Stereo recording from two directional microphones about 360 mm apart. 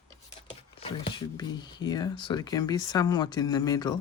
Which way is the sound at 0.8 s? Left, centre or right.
Centre.